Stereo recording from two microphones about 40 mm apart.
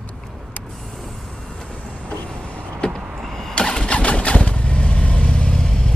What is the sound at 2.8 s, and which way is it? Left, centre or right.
Power windows, left.